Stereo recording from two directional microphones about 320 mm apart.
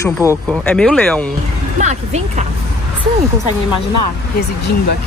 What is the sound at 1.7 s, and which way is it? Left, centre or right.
Speech, right.